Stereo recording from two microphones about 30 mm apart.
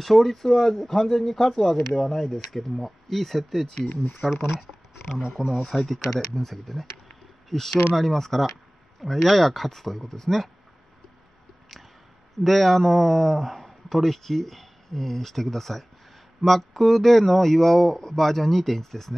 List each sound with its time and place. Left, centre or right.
0.0 s a man's voice: centre
3.9 s speech: left
4.5 s speech: centre
5.7 s a man's voice: centre
12.4 s a man's voice: centre